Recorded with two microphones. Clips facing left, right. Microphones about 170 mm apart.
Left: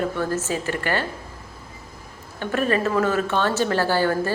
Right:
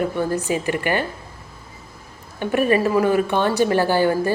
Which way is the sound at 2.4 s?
15° right (ahead or behind).